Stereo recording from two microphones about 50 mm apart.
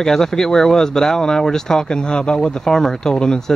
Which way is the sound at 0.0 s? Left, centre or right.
Centre.